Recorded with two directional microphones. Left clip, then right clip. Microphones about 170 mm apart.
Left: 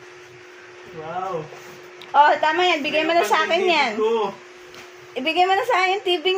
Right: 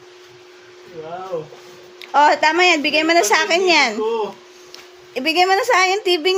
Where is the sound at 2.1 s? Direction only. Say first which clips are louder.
Right 2 dB; 40° right (ahead or behind).